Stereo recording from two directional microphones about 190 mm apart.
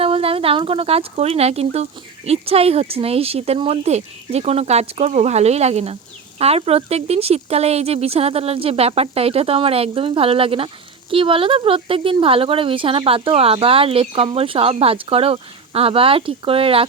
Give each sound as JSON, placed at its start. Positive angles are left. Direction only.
{"t": 0.0, "sound": "speech", "side_deg": -30}